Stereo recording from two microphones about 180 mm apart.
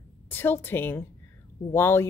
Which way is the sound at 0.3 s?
10° left (ahead or behind).